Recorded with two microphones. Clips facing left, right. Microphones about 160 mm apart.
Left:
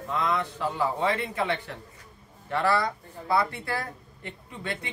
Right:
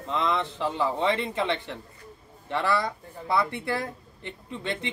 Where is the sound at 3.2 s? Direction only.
20° right (ahead or behind).